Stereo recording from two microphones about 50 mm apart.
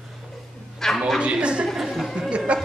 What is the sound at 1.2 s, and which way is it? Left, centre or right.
Speech, right.